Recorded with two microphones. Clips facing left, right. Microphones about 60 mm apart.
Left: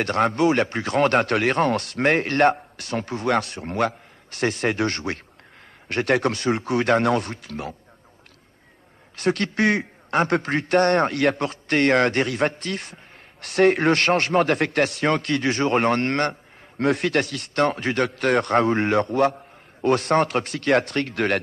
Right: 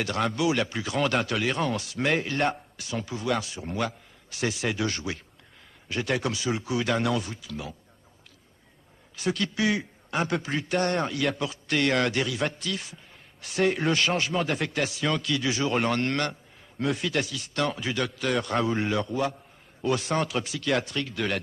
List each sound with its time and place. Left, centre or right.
0.0 s a man's voice: left
9.1 s a man's voice: left